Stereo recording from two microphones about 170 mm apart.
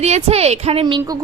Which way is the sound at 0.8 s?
25° right (ahead or behind).